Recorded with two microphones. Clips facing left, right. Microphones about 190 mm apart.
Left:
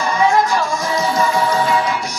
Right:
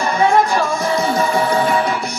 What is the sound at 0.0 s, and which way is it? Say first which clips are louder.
Music: right 1 dB; 60° right (ahead or behind).